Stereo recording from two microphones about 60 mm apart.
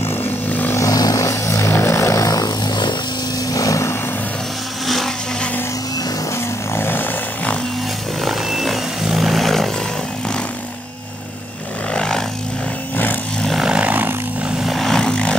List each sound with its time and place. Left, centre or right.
0.0 s vehicle: left
0.5 s vehicle: left
0.7 s vehicle: left
4.8 s a sound: centre
6.7 s vehicle: left
8.3 s vehicle: centre
11.9 s vehicle: centre
12.9 s a sound: left
13.6 s vehicle: centre
14.6 s vehicle: centre